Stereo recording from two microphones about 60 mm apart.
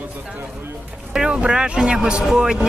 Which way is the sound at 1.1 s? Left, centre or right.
Centre.